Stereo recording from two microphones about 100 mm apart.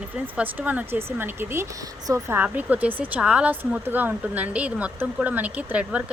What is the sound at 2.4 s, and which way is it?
Speech, 15° right (ahead or behind).